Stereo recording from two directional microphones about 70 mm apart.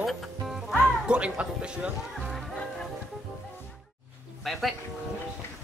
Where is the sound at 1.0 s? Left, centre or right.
Centre.